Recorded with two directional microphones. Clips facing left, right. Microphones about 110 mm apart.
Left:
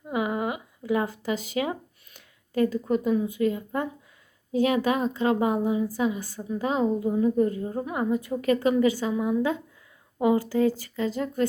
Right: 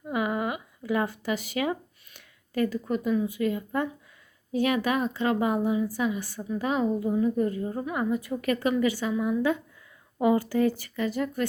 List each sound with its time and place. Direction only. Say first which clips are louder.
0.1 s a sound: left 1 dB; 25° left (ahead or behind)
2.5 s speech: left 3 dB; 20° left (ahead or behind)
2.9 s a woman's voice: left 2 dB; 30° left (ahead or behind)